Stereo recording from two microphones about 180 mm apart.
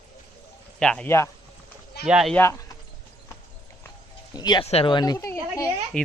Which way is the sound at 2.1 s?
5° right (ahead or behind).